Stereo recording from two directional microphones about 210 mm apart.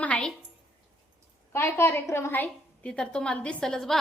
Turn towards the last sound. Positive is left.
turn(degrees=0)  # may be behind; listen again after turning